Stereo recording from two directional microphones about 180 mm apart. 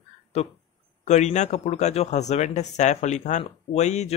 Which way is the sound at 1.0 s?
40° left (ahead or behind).